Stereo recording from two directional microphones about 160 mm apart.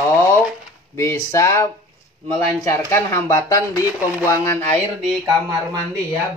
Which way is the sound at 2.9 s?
15° left (ahead or behind).